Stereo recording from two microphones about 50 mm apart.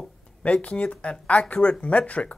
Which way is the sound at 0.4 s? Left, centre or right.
Left.